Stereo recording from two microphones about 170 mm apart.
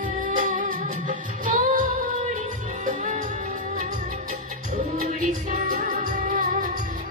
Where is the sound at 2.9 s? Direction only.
45° right (ahead or behind).